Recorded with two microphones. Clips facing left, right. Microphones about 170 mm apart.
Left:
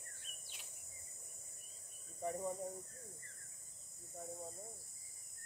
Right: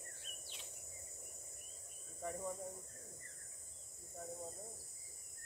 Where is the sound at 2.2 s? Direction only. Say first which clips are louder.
Left 3 dB; 20° left (ahead or behind).